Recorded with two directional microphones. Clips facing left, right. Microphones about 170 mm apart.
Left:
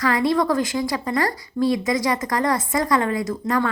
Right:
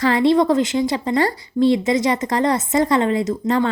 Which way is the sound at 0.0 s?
25° right (ahead or behind).